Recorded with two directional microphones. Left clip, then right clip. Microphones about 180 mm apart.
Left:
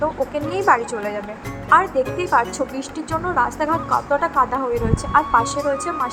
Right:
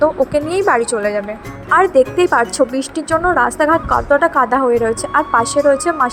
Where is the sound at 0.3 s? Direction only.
20° right (ahead or behind).